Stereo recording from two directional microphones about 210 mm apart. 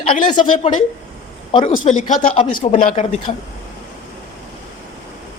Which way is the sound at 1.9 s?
35° left (ahead or behind).